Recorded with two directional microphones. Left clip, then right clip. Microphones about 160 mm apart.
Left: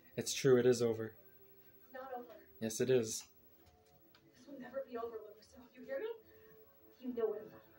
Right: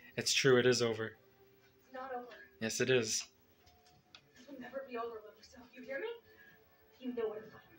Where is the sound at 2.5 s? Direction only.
10° left (ahead or behind).